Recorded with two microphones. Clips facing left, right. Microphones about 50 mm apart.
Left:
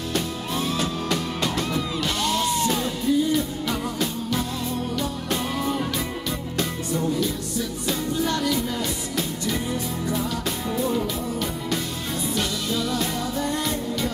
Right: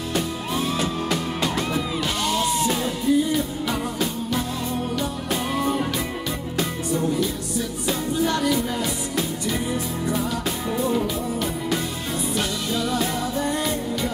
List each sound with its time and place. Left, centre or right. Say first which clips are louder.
0.1 s music: right 2 dB; centre
5.6 s music: right 2 dB; centre
8.3 s music: right 2 dB; centre
12.4 s music: even; centre